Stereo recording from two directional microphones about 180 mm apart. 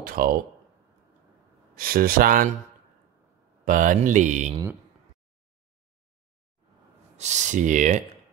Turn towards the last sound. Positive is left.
turn(degrees=-45)  # may be behind; listen again after turning